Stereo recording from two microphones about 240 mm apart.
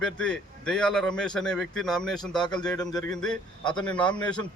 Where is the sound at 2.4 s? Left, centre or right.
Centre.